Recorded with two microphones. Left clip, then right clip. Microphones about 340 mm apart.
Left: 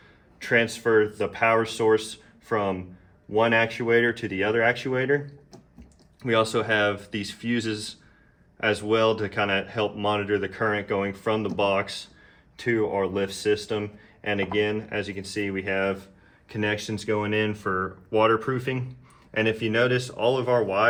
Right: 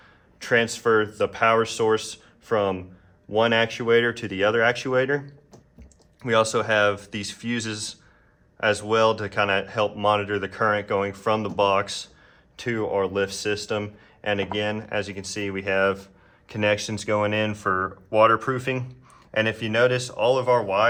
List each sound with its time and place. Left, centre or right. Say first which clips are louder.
0.4 s speech: right 2 dB; right
6.2 s speech: right 2 dB; centre